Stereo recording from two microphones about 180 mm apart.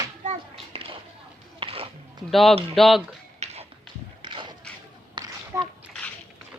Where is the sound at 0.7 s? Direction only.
35° right (ahead or behind).